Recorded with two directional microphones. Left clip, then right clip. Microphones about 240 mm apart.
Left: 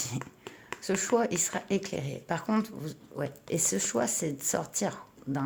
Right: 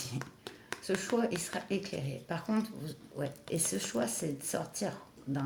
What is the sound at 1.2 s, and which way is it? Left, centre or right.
Speech, left.